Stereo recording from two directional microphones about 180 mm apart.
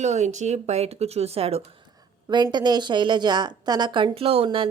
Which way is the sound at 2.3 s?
25° right (ahead or behind).